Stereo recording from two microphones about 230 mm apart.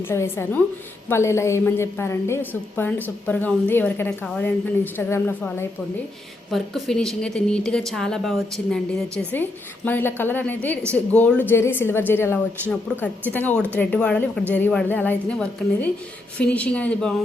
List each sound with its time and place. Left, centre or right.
0.0 s a woman's voice: centre